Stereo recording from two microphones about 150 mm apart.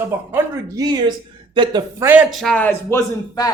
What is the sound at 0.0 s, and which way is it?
Speech, 15° right (ahead or behind).